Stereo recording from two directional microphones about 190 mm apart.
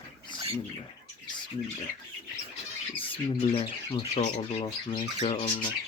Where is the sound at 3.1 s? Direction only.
30° left (ahead or behind).